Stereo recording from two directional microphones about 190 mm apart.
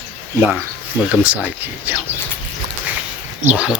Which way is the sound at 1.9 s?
10° right (ahead or behind).